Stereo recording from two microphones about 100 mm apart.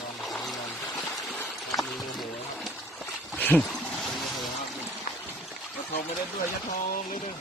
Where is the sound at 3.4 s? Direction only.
15° left (ahead or behind).